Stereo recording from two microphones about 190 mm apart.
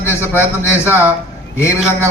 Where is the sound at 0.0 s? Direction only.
10° left (ahead or behind).